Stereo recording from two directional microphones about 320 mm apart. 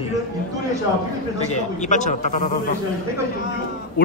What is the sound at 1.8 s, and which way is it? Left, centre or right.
Speech, left.